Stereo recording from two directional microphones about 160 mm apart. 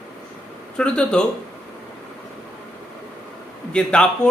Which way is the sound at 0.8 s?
5° left (ahead or behind).